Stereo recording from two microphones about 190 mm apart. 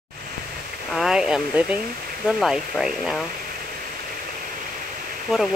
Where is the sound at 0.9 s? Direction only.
5° right (ahead or behind).